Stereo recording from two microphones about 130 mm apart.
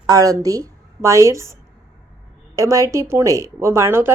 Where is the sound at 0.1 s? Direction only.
30° right (ahead or behind).